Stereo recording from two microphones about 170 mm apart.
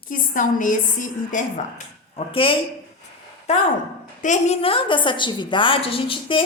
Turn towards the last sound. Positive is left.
turn(degrees=30)  # may be behind; listen again after turning